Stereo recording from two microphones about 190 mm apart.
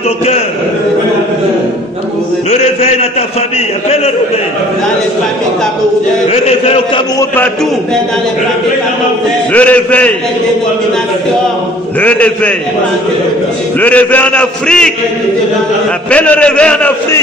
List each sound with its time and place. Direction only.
2.5 s a man's voice: 35° left (ahead or behind)
6.3 s a man's voice: 35° left (ahead or behind)
9.5 s a man's voice: 10° left (ahead or behind)
12.0 s a man's voice: 5° left (ahead or behind)
13.7 s a man's voice: 10° left (ahead or behind)
16.1 s a man's voice: 5° left (ahead or behind)